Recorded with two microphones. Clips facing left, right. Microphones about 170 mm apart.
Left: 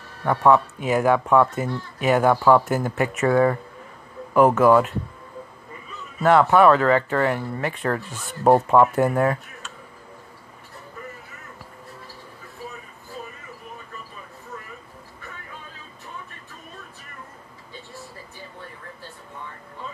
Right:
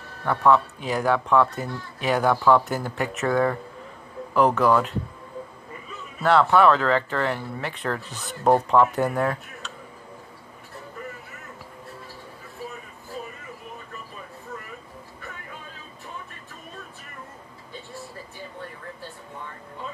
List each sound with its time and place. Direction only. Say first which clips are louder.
0.2 s speech: left 2 dB; 10° left (ahead or behind)
6.2 s speech: left 2 dB; 5° left (ahead or behind)
8.1 s speech: even; 40° right (ahead or behind)
8.6 s speech: left 3 dB; 5° left (ahead or behind)